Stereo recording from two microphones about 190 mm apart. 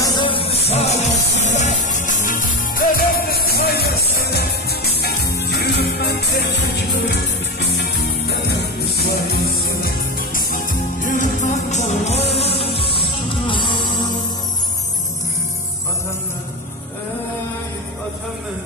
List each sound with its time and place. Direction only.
0.0 s music: 25° left (ahead or behind)